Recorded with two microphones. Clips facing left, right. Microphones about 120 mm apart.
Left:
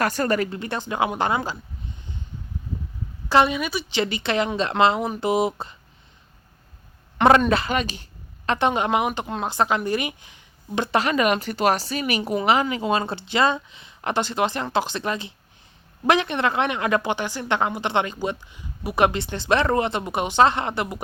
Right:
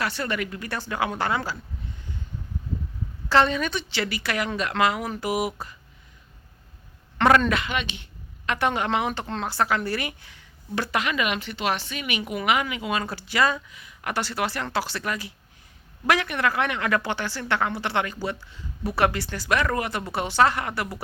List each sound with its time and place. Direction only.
0.0 s a woman's voice: 45° left (ahead or behind); by 2.2 s 20° left (ahead or behind)
3.2 s a woman's voice: 15° left (ahead or behind)
3.9 s a woman's voice: 25° left (ahead or behind)
7.3 s a woman's voice: 25° left (ahead or behind)
7.6 s speech: 40° left (ahead or behind)
8.4 s a woman's voice: 20° left (ahead or behind)
10.9 s a woman's voice: 35° left (ahead or behind)